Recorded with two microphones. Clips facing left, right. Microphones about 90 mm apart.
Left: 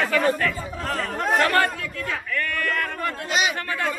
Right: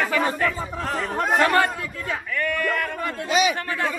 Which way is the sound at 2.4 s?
15° right (ahead or behind).